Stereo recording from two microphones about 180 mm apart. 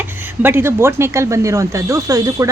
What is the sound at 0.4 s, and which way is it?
Speech, 15° right (ahead or behind).